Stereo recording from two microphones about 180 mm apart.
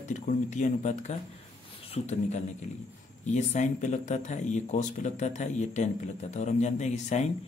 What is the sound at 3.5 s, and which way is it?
Speech, 40° left (ahead or behind).